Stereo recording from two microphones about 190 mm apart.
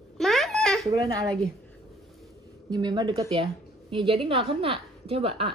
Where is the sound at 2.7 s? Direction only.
20° right (ahead or behind).